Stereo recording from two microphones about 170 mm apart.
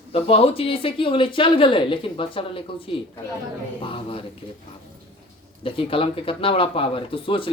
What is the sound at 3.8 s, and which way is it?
Speech, 30° left (ahead or behind).